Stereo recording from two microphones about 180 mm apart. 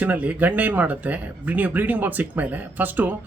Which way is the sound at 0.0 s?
10° right (ahead or behind).